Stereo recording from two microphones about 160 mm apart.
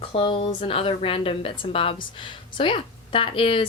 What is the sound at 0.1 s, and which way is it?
Speech, 35° left (ahead or behind).